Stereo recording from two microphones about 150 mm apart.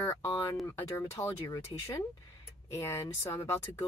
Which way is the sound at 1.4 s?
25° left (ahead or behind).